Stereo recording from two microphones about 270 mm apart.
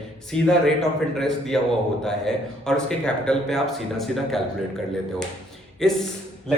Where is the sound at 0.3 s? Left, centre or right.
Centre.